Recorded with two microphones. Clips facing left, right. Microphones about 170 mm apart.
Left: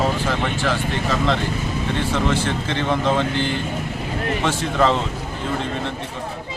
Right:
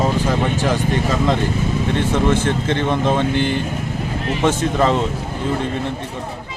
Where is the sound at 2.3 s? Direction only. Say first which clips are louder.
Right 4 dB; 50° right (ahead or behind).